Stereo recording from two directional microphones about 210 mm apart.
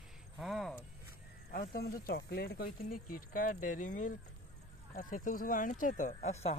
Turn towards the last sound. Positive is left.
turn(degrees=35)  # may be behind; listen again after turning